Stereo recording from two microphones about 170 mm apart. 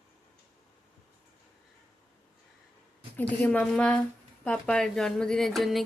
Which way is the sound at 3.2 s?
10° left (ahead or behind).